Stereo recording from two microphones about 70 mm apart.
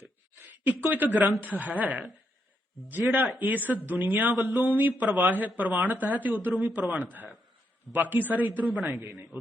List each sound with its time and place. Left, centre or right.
0.0 s a sound: right
1.4 s speech: right
3.1 s speech: right
8.1 s speech: right
8.7 s a man's voice: centre
9.1 s speech: right